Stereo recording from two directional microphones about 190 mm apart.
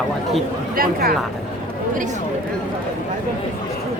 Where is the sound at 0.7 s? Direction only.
50° right (ahead or behind).